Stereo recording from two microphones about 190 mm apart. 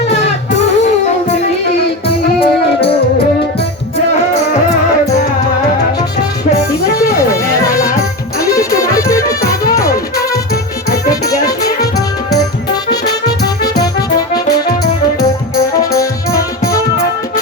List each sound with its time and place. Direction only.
2.4 s music: 30° left (ahead or behind)
8.5 s music: 15° left (ahead or behind)
16.0 s music: 15° left (ahead or behind)